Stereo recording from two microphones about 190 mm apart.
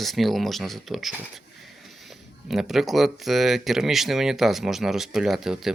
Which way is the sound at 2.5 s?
Centre (ahead or behind).